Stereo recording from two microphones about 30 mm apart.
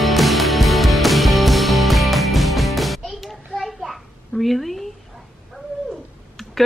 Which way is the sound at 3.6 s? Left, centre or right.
Centre.